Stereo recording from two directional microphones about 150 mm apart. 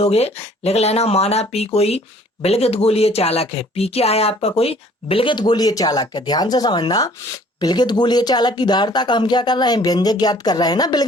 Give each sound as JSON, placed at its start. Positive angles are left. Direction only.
{"t": 0.0, "sound": "speech", "side_deg": 45}